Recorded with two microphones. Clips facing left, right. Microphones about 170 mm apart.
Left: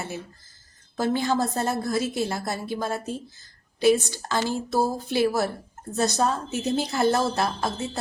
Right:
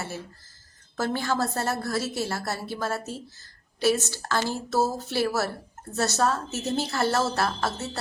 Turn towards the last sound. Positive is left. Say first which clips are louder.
# left 1 dB
turn(degrees=15)  # may be behind; listen again after turning